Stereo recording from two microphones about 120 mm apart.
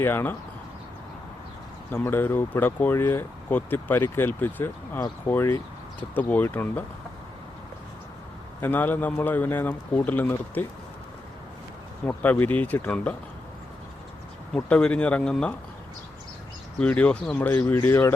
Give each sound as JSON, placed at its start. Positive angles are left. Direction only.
{"t": 0.0, "sound": "speech", "side_deg": 20}
{"t": 1.9, "sound": "speech", "side_deg": 15}
{"t": 4.9, "sound": "speech", "side_deg": 30}
{"t": 8.6, "sound": "speech", "side_deg": 15}
{"t": 12.0, "sound": "speech", "side_deg": 15}
{"t": 14.5, "sound": "speech", "side_deg": 10}
{"t": 16.8, "sound": "speech", "side_deg": 10}